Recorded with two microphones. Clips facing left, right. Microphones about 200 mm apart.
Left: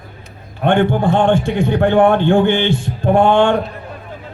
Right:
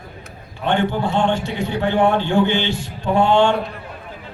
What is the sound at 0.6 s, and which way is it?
A man's voice, 55° left (ahead or behind).